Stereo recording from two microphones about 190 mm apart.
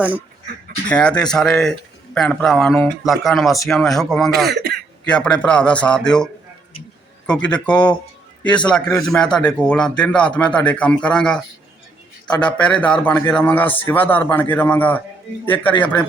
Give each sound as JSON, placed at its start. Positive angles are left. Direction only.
{"t": 0.9, "sound": "a man's voice", "side_deg": 5}
{"t": 4.4, "sound": "speech", "side_deg": -60}
{"t": 5.0, "sound": "a man's voice", "side_deg": 5}